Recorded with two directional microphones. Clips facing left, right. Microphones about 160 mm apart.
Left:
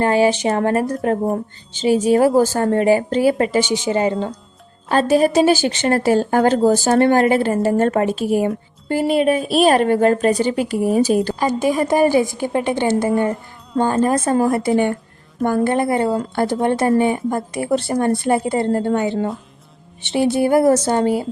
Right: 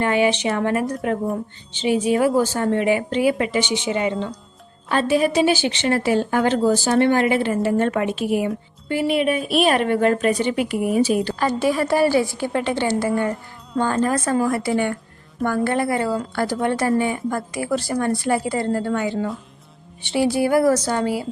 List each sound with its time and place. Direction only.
0.0 s a woman's voice: 35° left (ahead or behind)
11.3 s a woman's voice: 15° left (ahead or behind)